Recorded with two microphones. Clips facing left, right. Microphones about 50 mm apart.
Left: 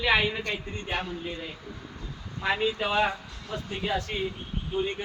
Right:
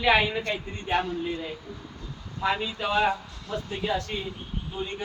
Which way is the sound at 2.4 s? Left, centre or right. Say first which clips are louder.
Even; centre.